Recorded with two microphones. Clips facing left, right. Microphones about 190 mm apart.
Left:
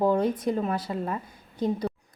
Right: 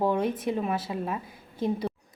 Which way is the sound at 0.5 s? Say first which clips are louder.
Left 1 dB; 10° right (ahead or behind).